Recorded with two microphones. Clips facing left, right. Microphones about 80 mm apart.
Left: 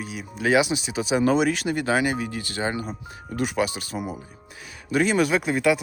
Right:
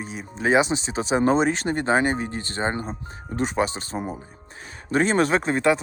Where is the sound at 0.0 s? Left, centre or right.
Right.